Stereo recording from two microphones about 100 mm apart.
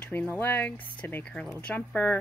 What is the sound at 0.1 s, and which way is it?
Speech, 20° left (ahead or behind).